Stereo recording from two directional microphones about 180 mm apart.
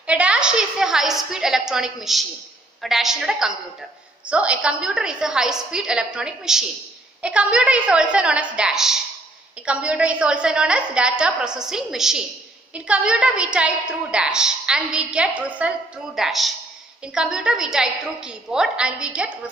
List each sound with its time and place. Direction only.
0.0 s a woman's voice: 5° right (ahead or behind)